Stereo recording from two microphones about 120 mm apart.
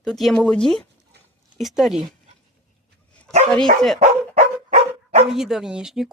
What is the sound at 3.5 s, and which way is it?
Speech, 5° left (ahead or behind).